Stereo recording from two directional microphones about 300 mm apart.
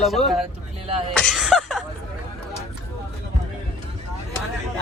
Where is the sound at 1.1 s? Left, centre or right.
Centre.